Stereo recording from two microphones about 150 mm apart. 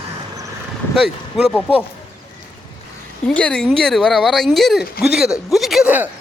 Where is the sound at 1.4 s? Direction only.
Centre (ahead or behind).